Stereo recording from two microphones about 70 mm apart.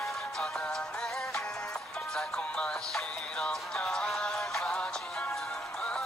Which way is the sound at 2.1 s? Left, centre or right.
Centre.